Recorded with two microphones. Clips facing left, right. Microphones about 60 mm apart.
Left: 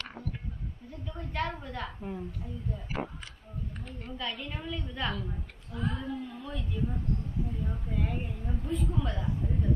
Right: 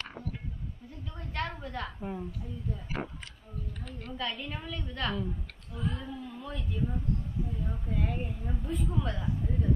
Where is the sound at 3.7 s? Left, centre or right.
Left.